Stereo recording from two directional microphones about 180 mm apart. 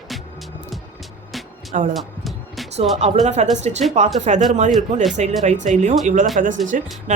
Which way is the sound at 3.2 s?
40° right (ahead or behind).